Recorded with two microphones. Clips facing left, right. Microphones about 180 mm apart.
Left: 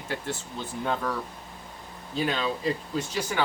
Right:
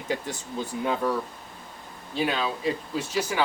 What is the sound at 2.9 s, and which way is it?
Speech, 5° right (ahead or behind).